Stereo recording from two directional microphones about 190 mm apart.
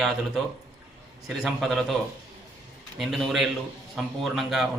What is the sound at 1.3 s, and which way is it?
Speech, centre (ahead or behind).